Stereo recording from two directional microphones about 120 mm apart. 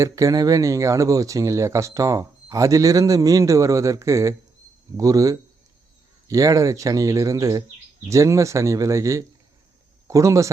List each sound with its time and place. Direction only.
0.0 s speech: 30° right (ahead or behind)